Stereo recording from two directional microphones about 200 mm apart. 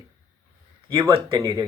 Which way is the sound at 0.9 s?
20° right (ahead or behind).